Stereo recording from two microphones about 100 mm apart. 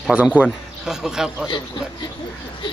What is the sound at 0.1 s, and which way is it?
Speech, 10° right (ahead or behind).